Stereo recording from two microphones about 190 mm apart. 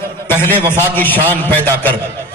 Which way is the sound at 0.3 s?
10° left (ahead or behind).